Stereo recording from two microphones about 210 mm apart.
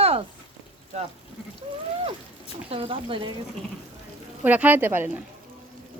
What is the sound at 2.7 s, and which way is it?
Speech, 25° right (ahead or behind).